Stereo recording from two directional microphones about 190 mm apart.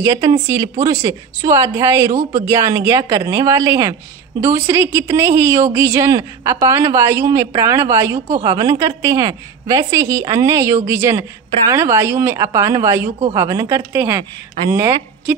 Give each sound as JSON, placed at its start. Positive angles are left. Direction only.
{"t": 0.1, "sound": "speech", "side_deg": -30}
{"t": 0.5, "sound": "a woman's voice", "side_deg": -15}